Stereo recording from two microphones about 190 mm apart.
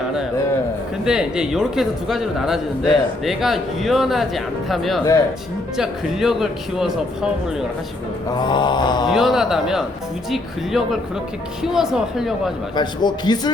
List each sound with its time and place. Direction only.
1.0 s a man's voice: 5° right (ahead or behind)
8.4 s speech: 25° left (ahead or behind)
9.0 s a man's voice: centre (ahead or behind)
12.7 s speech: 25° left (ahead or behind)